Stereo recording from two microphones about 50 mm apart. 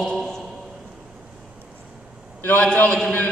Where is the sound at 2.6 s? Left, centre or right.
Left.